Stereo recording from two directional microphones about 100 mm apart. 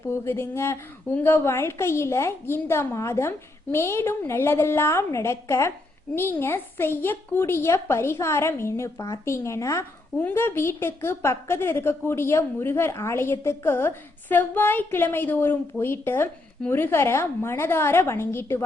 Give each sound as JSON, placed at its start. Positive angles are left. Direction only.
{"t": 0.1, "sound": "a woman's voice", "side_deg": 25}